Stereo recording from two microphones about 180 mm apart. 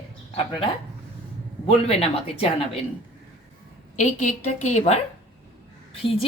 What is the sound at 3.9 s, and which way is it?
A woman's voice, 40° left (ahead or behind).